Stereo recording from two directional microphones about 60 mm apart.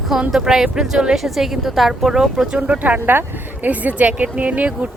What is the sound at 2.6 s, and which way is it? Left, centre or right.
Speech, right.